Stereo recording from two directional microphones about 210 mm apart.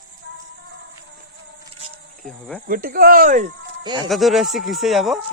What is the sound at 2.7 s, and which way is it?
Speech, 45° right (ahead or behind).